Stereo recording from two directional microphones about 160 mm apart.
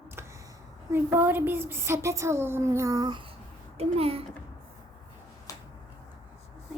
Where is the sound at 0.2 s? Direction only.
15° right (ahead or behind).